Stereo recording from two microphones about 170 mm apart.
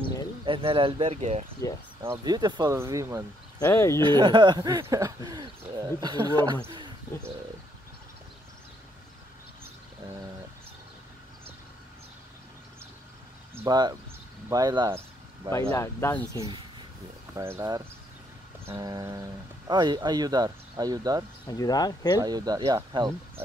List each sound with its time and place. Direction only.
0.5 s speech: 30° right (ahead or behind)
1.6 s speech: 20° left (ahead or behind)
2.0 s speech: 25° right (ahead or behind)
3.5 s speech: 15° left (ahead or behind)
4.0 s speech: 30° right (ahead or behind)
13.6 s speech: 25° right (ahead or behind)
15.7 s speech: 15° left (ahead or behind)
17.4 s speech: 15° right (ahead or behind)
21.5 s speech: 20° left (ahead or behind)
22.2 s speech: 20° right (ahead or behind)